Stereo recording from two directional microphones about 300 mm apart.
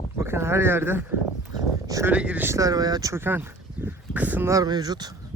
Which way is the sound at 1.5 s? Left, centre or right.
Centre.